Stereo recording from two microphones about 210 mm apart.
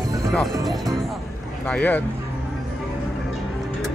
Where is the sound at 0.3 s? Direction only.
Centre (ahead or behind).